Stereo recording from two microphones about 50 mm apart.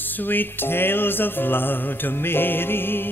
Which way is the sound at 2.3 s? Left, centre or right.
Left.